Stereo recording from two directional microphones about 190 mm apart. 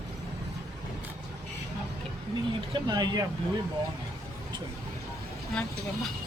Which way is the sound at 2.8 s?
20° right (ahead or behind).